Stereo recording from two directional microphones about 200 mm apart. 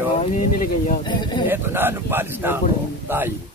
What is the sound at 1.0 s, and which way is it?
Speech, 25° left (ahead or behind).